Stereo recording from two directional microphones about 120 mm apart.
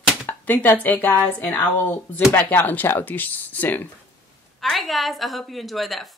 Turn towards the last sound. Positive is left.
turn(degrees=0)  # may be behind; listen again after turning